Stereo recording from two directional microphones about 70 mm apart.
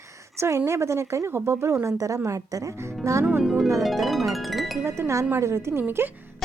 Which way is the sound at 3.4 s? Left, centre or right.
Centre.